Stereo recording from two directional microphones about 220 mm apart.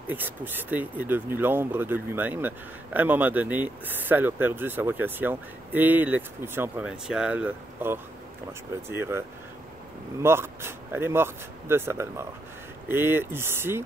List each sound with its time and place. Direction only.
0.1 s speech: 10° right (ahead or behind)
10.2 s speech: 10° right (ahead or behind)